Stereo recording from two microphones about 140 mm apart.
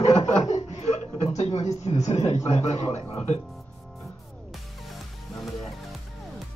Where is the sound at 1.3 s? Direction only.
50° left (ahead or behind).